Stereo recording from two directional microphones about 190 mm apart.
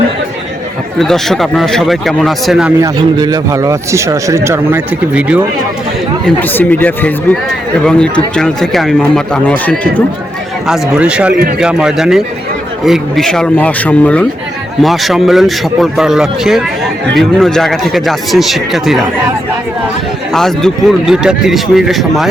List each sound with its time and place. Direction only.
0.9 s speech: centre (ahead or behind)
2.8 s speech: 20° right (ahead or behind)
6.2 s speech: 10° left (ahead or behind)
10.7 s speech: 5° right (ahead or behind)
20.3 s speech: centre (ahead or behind)